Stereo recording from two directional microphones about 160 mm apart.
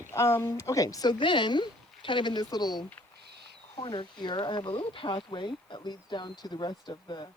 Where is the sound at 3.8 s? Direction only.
30° left (ahead or behind).